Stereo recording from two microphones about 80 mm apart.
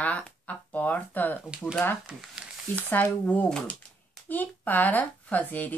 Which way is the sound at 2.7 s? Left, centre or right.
Left.